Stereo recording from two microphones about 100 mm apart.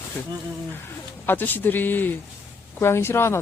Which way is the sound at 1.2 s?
20° left (ahead or behind).